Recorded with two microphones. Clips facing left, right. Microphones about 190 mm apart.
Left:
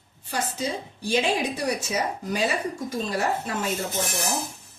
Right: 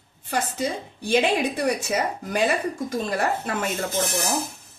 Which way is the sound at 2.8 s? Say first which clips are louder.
Right 1 dB; 55° right (ahead or behind).